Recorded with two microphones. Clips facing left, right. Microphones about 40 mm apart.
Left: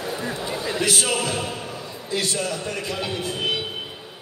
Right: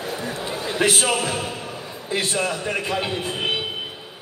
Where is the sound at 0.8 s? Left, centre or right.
Right.